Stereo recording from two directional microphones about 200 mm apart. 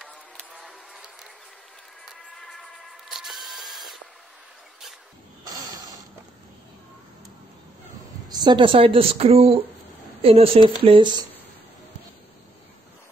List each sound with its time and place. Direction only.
0.0 s a sound: centre (ahead or behind)
2.0 s camera: centre (ahead or behind)
8.3 s speech: 20° right (ahead or behind)